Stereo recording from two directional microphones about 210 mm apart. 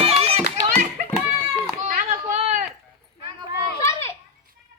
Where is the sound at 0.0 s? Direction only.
25° right (ahead or behind).